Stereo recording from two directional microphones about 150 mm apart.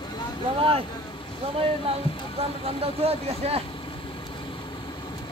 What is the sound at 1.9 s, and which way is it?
Speech, 40° right (ahead or behind).